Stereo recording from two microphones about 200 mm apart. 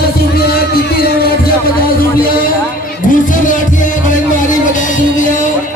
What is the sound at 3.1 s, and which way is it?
Music, 40° left (ahead or behind).